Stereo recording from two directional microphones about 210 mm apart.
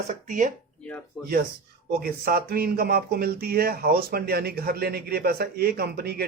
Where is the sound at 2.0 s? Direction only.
45° right (ahead or behind).